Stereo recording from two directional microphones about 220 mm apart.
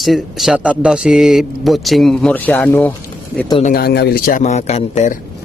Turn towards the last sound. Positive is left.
turn(degrees=30)  # may be behind; listen again after turning